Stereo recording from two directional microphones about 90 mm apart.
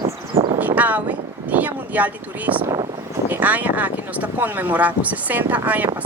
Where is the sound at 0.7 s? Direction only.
20° right (ahead or behind).